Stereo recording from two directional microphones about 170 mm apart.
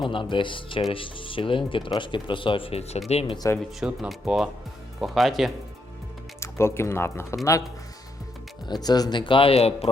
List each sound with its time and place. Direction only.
0.0 s speech: 30° left (ahead or behind)
3.8 s speech: 5° right (ahead or behind)
6.4 s speech: 15° left (ahead or behind)
8.6 s speech: 25° left (ahead or behind)